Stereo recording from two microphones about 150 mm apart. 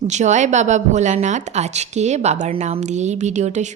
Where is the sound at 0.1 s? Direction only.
50° right (ahead or behind).